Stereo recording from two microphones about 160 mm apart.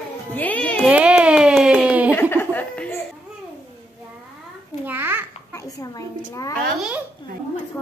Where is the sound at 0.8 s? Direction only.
5° right (ahead or behind).